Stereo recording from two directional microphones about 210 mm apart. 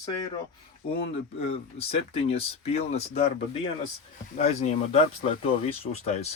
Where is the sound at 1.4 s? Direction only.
30° left (ahead or behind).